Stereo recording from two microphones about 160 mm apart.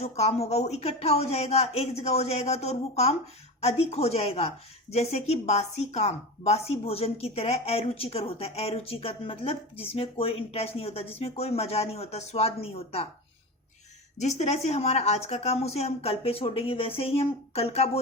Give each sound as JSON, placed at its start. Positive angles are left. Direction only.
{"t": 0.0, "sound": "speech", "side_deg": 40}
{"t": 14.2, "sound": "speech", "side_deg": 45}